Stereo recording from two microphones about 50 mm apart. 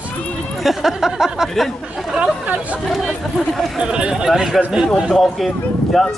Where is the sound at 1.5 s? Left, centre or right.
Centre.